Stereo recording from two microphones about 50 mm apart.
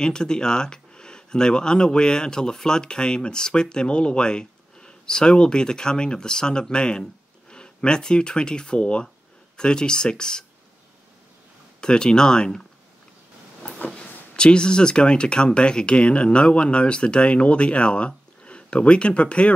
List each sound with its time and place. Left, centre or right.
0.0 s speech: centre
11.8 s speech: centre
13.8 s speech: centre